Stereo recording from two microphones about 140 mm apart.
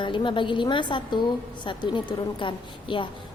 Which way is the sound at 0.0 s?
35° left (ahead or behind).